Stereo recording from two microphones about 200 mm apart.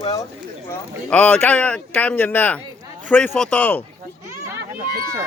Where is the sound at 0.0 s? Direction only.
20° left (ahead or behind).